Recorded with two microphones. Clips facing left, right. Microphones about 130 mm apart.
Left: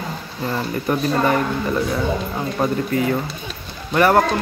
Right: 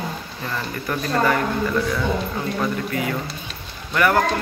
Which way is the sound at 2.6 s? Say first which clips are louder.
Left 7 dB; 35° left (ahead or behind).